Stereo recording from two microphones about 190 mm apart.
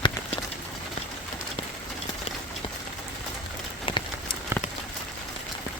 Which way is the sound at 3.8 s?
25° left (ahead or behind).